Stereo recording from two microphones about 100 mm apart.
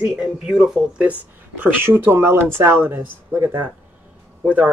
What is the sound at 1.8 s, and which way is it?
Speech, 20° right (ahead or behind).